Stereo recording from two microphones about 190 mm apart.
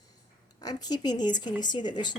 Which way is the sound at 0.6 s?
20° left (ahead or behind).